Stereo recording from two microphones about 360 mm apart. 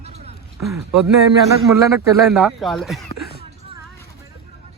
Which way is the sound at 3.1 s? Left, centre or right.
Left.